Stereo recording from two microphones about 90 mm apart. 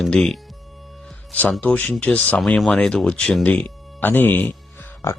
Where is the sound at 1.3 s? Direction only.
15° left (ahead or behind).